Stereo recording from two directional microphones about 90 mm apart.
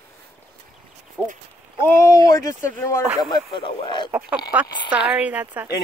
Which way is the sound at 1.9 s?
35° left (ahead or behind).